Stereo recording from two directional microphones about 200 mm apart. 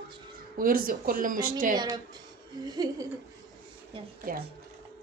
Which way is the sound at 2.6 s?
20° right (ahead or behind).